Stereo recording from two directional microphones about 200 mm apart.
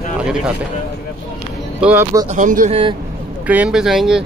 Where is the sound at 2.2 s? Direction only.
40° right (ahead or behind).